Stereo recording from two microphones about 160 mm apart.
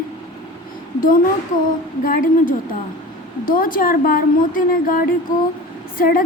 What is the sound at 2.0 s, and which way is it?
Speech, 60° left (ahead or behind).